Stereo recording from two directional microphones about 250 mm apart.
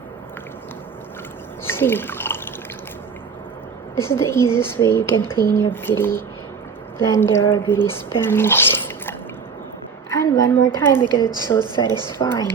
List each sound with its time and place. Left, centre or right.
1.6 s drip: centre
3.9 s speech: centre
10.2 s a woman's voice: centre
11.1 s a woman's voice: centre
12.2 s speech: centre